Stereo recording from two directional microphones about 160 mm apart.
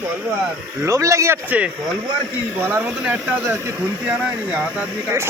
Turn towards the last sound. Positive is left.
turn(degrees=-15)  # may be behind; listen again after turning